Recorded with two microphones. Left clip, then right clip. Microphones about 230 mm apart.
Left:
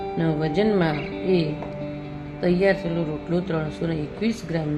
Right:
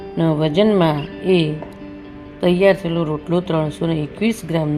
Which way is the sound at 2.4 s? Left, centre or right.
Centre.